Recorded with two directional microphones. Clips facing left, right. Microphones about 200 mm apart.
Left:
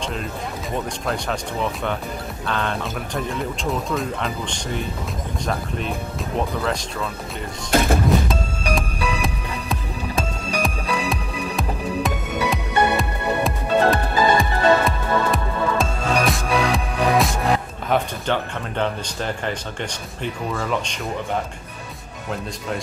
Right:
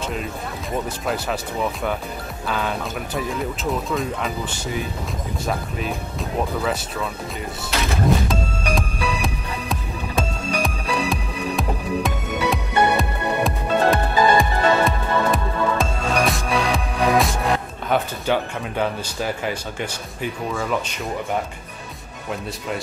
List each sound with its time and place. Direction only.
0.0 s music: 5° right (ahead or behind)
1.0 s speech: 5° right (ahead or behind)
7.7 s speech: 50° left (ahead or behind)
8.3 s music: centre (ahead or behind)